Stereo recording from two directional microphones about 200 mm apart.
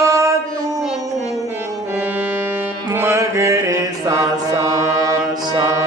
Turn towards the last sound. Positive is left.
turn(degrees=-15)  # may be behind; listen again after turning